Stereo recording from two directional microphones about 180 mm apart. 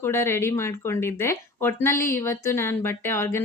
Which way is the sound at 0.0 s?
15° left (ahead or behind).